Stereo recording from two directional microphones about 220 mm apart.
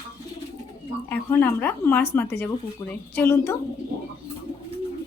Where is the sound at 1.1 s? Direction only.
10° left (ahead or behind).